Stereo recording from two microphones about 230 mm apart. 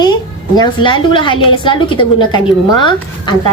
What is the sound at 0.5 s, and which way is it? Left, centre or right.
A woman's voice, centre.